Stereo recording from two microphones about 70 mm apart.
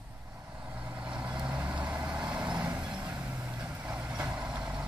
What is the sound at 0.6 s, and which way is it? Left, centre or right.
Vehicle, right.